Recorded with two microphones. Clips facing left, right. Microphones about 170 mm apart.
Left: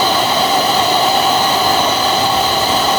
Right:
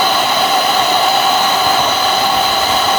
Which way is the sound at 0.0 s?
35° left (ahead or behind).